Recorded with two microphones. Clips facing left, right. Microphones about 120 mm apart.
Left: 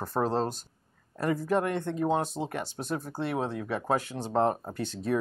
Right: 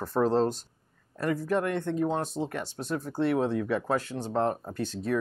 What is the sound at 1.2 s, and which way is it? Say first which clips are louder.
Speech: even; 20° left (ahead or behind).